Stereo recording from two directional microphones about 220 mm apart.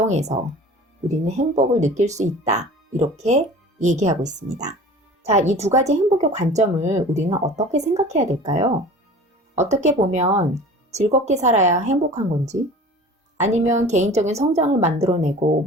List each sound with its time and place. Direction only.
0.1 s a woman's voice: 30° right (ahead or behind)